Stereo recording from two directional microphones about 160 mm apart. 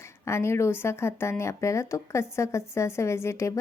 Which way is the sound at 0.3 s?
15° left (ahead or behind).